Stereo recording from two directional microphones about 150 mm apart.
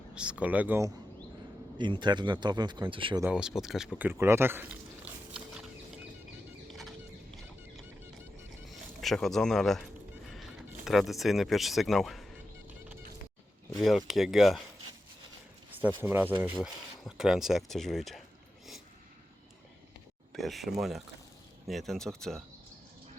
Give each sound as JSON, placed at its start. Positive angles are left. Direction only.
{"t": 0.1, "sound": "speech", "side_deg": -5}
{"t": 1.8, "sound": "speech", "side_deg": -30}
{"t": 3.3, "sound": "speech", "side_deg": -5}
{"t": 8.7, "sound": "bird", "side_deg": 0}
{"t": 13.7, "sound": "speech", "side_deg": 0}
{"t": 16.0, "sound": "speech", "side_deg": -15}
{"t": 16.6, "sound": "speech", "side_deg": 0}
{"t": 20.3, "sound": "speech", "side_deg": 0}